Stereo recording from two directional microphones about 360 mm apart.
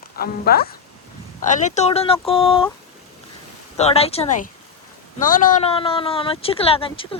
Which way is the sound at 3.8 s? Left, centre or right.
Centre.